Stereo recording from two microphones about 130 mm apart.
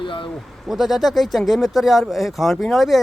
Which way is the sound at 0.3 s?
Centre (ahead or behind).